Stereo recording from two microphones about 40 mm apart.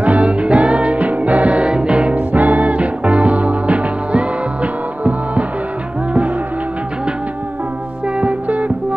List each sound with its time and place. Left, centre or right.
0.0 s music: right
2.1 s music: right
8.2 s music: right